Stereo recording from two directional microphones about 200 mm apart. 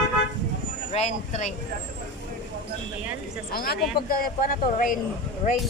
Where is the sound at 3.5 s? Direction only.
50° left (ahead or behind).